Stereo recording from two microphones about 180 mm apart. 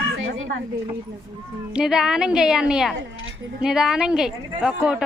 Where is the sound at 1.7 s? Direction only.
5° right (ahead or behind).